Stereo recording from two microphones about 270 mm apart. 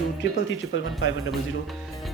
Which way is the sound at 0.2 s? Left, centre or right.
Left.